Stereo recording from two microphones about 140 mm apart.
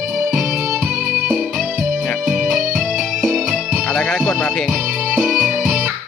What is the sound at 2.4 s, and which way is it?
Music, 70° right (ahead or behind).